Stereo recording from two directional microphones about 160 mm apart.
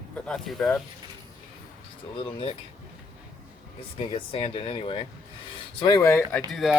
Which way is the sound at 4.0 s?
35° left (ahead or behind).